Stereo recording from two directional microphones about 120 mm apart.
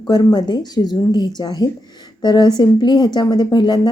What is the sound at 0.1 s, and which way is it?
Speech, 35° left (ahead or behind).